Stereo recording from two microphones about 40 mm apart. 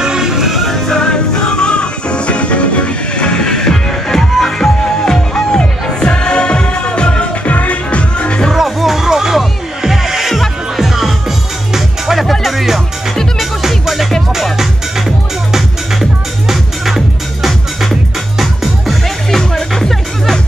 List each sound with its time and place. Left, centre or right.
0.0 s music: centre
0.7 s music: centre; by 8.4 s left
8.5 s music: centre